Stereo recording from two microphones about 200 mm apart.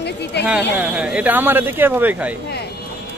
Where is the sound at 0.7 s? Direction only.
5° right (ahead or behind).